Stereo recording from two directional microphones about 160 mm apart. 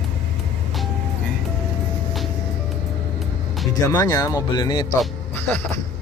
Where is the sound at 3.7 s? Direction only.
25° left (ahead or behind).